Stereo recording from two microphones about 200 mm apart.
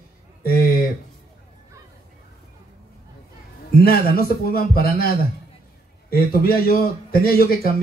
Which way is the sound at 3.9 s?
50° left (ahead or behind).